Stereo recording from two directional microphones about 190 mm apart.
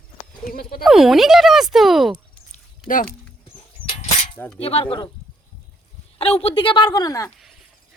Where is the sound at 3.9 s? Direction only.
30° left (ahead or behind).